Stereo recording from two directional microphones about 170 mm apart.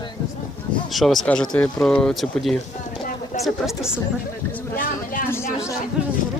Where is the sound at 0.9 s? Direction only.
Centre (ahead or behind).